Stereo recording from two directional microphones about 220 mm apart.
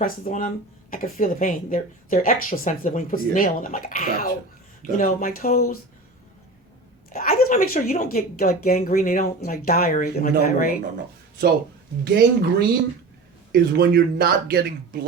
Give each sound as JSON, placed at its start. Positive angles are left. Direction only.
{"t": 0.0, "sound": "speech", "side_deg": 35}
{"t": 7.1, "sound": "speech", "side_deg": 40}
{"t": 12.0, "sound": "speech", "side_deg": -50}